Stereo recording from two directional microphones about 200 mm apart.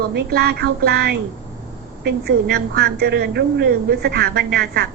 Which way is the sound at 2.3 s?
55° right (ahead or behind).